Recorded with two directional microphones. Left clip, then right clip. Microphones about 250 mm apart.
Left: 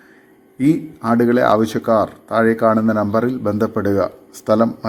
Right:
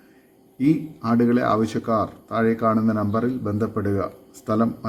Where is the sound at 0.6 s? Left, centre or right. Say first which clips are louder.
Left 4 dB; centre.